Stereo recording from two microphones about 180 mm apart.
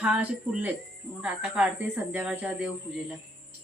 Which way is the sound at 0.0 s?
5° right (ahead or behind).